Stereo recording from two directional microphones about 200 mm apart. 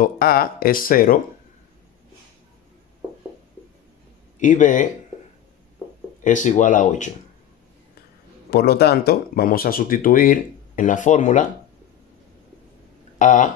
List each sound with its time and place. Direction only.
0.0 s speech: 50° left (ahead or behind)
4.4 s speech: 40° left (ahead or behind)
6.2 s speech: 40° left (ahead or behind)
8.5 s speech: 55° left (ahead or behind); by 11.4 s 35° left (ahead or behind)
13.2 s speech: 40° left (ahead or behind)